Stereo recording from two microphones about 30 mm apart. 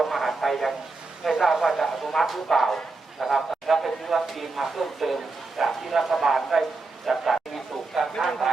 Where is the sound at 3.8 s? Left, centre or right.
Centre.